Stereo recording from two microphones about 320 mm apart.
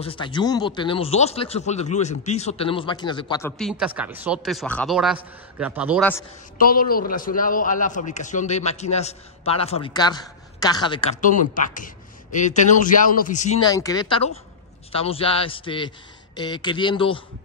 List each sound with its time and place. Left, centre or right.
0.0 s a man's voice: centre
6.6 s a man's voice: left